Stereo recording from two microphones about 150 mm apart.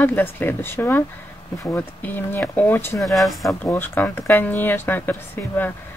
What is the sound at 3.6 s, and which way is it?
Speech, 15° left (ahead or behind).